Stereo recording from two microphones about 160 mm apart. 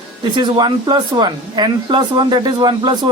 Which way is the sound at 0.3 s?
25° right (ahead or behind).